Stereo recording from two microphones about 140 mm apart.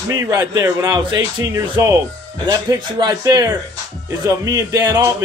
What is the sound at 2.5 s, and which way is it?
A man's voice, 30° right (ahead or behind).